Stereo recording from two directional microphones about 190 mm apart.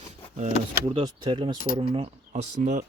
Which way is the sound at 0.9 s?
25° right (ahead or behind).